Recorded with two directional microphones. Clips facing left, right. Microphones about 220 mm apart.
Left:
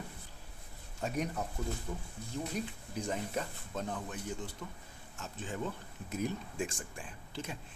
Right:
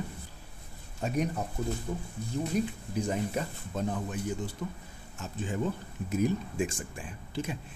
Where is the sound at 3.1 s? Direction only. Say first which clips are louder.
Right 5 dB; 10° right (ahead or behind).